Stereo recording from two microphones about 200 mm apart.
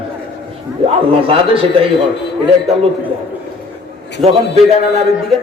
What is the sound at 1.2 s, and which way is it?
Speech, 25° right (ahead or behind).